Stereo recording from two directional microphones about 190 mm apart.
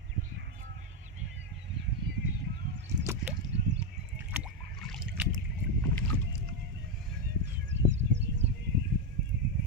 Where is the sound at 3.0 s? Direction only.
15° right (ahead or behind).